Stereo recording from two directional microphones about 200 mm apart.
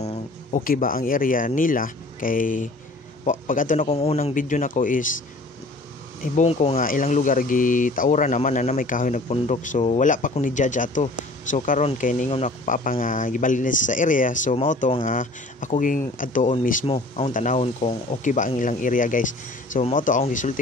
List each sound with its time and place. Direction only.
0.0 s speech: 35° left (ahead or behind)
6.2 s speech: 35° left (ahead or behind)
6.8 s speech: 45° left (ahead or behind)
16.8 s speech: 30° left (ahead or behind)
17.3 s speech: 40° left (ahead or behind)